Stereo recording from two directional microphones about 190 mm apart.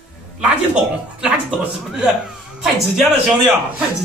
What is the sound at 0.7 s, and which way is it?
A man's voice, 5° right (ahead or behind).